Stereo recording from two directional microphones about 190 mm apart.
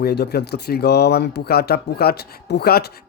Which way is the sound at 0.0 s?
55° left (ahead or behind).